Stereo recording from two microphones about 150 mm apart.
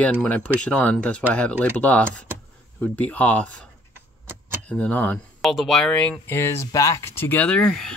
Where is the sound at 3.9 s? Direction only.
15° right (ahead or behind).